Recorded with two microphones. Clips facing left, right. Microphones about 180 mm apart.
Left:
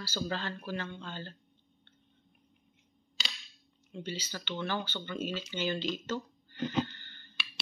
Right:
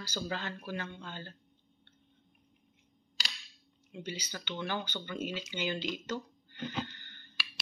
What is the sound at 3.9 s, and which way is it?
Speech, 15° right (ahead or behind).